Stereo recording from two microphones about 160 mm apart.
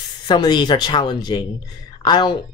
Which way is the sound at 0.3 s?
30° left (ahead or behind).